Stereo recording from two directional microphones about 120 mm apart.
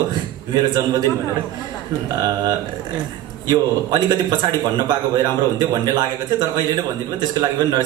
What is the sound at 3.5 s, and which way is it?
Speech, 35° right (ahead or behind).